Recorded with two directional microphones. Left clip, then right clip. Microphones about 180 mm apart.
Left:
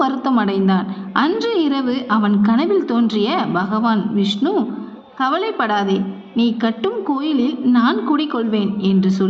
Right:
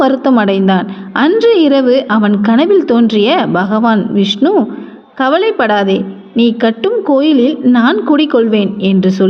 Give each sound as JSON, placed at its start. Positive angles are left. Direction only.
{"t": 0.0, "sound": "a woman's voice", "side_deg": -30}